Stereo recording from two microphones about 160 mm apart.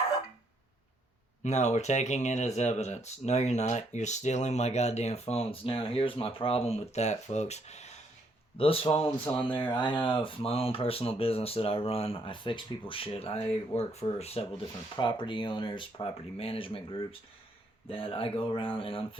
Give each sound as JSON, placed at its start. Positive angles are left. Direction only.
{"t": 1.5, "sound": "speech", "side_deg": 45}